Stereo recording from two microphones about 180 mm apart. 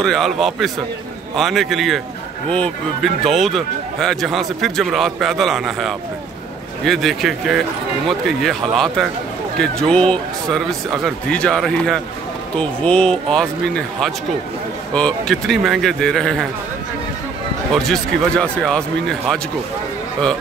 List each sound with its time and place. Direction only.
0.0 s speech: centre (ahead or behind)
17.7 s speech: centre (ahead or behind)